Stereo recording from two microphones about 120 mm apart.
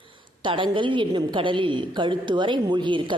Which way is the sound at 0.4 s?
45° right (ahead or behind).